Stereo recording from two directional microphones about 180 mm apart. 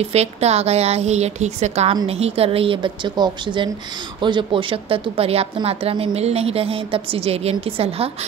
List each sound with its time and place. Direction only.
0.0 s a woman's voice: 35° right (ahead or behind)